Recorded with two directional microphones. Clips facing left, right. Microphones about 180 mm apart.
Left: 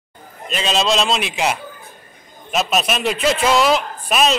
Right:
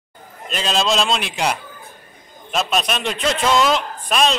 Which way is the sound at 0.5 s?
Centre (ahead or behind).